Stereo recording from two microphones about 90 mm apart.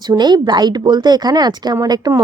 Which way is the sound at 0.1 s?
55° right (ahead or behind).